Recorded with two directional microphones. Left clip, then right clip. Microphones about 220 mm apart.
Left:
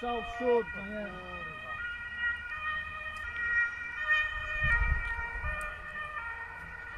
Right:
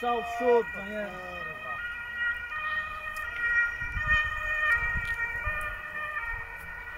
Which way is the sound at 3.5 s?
35° left (ahead or behind).